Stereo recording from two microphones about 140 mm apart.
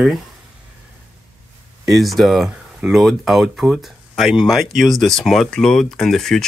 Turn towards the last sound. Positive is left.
turn(degrees=5)  # may be behind; listen again after turning